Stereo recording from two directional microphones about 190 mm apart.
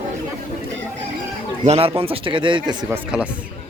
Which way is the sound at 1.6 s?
30° right (ahead or behind).